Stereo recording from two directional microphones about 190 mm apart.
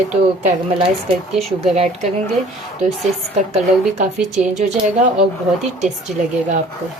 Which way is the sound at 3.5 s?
40° right (ahead or behind).